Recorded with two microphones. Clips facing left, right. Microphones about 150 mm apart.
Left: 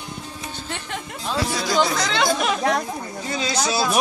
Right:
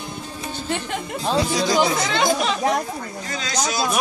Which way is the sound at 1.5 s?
15° right (ahead or behind).